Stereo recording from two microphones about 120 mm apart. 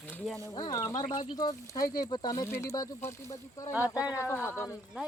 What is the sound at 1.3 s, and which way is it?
Speech, 30° left (ahead or behind).